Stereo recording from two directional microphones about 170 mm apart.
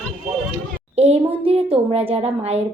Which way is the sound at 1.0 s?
35° right (ahead or behind).